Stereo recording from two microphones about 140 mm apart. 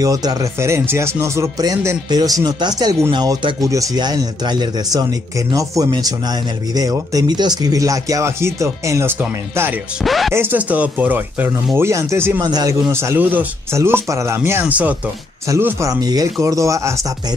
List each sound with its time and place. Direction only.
0.0 s speech: 25° right (ahead or behind)
10.0 s music: centre (ahead or behind)
10.3 s speech: 15° right (ahead or behind)
12.4 s speech: 30° right (ahead or behind); by 15.0 s 10° right (ahead or behind)
15.4 s speech: 20° right (ahead or behind)